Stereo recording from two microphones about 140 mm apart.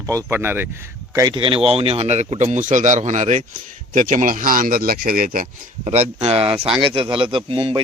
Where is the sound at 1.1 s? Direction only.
30° right (ahead or behind); by 5.4 s 90° right.